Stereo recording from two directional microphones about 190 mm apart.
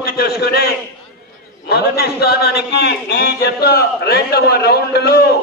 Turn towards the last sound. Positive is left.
turn(degrees=55)  # may be behind; listen again after turning